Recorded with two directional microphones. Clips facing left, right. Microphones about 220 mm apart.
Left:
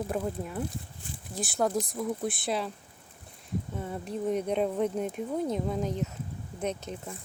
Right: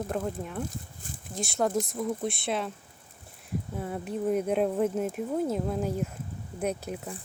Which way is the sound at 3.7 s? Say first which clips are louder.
Right 4 dB; 5° right (ahead or behind).